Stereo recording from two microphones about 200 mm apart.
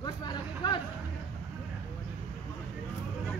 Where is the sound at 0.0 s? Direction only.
20° left (ahead or behind).